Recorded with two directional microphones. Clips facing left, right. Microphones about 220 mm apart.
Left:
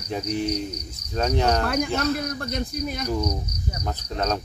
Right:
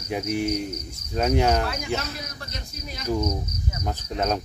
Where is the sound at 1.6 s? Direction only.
55° left (ahead or behind).